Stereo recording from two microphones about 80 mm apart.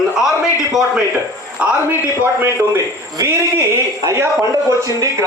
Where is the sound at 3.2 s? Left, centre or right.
Right.